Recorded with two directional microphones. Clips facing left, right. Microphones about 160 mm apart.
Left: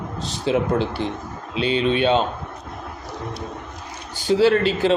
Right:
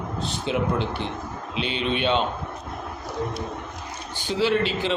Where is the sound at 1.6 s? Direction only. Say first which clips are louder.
Left 6 dB; 40° left (ahead or behind).